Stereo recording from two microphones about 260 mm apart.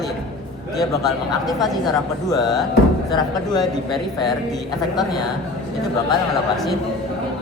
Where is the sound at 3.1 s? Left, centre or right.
Centre.